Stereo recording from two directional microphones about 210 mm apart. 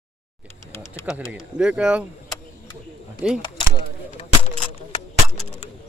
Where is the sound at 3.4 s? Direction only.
20° left (ahead or behind).